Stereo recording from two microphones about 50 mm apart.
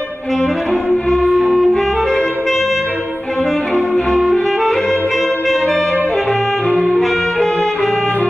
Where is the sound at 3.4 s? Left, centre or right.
Centre.